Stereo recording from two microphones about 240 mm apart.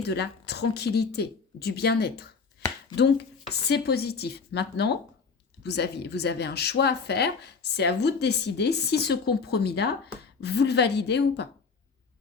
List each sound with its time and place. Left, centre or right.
0.0 s speech: left